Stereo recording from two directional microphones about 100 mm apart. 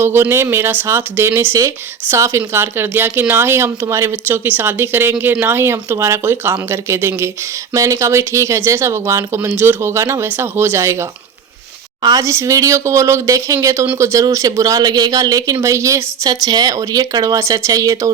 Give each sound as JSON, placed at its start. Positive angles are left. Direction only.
{"t": 0.0, "sound": "speech", "side_deg": -25}
{"t": 12.0, "sound": "speech", "side_deg": -30}